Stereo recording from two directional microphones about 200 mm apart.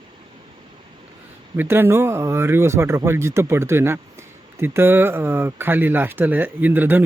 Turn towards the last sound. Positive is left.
turn(degrees=-10)  # may be behind; listen again after turning